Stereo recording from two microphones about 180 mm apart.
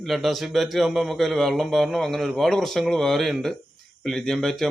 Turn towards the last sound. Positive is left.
turn(degrees=0)  # may be behind; listen again after turning